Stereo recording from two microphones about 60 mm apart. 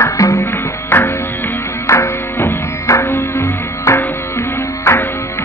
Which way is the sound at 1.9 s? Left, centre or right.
Left.